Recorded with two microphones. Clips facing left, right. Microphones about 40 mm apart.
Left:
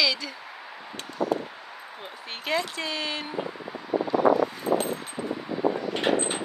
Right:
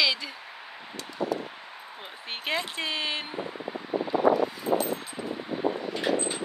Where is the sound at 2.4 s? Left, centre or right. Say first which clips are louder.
Left 2 dB; right.